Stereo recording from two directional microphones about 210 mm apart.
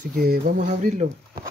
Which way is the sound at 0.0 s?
45° right (ahead or behind).